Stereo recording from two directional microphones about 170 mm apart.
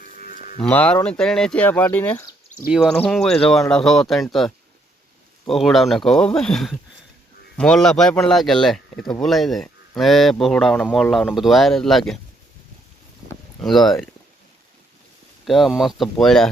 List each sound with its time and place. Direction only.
0.0 s moo: 55° left (ahead or behind)
0.6 s speech: 10° left (ahead or behind)
2.6 s speech: centre (ahead or behind)
13.6 s speech: centre (ahead or behind)
15.4 s speech: centre (ahead or behind)